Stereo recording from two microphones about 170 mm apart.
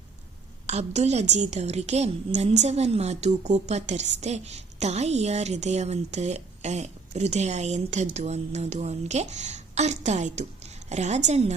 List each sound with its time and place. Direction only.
0.7 s a woman's voice: 40° right (ahead or behind)